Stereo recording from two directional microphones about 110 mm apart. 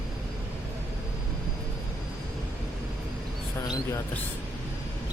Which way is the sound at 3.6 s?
35° left (ahead or behind).